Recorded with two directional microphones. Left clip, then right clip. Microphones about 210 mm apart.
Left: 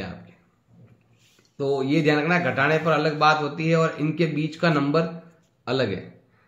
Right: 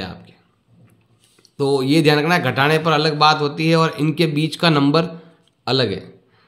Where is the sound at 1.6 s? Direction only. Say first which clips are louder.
Right 6 dB; 45° right (ahead or behind).